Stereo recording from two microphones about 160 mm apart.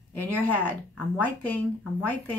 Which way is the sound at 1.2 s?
10° left (ahead or behind).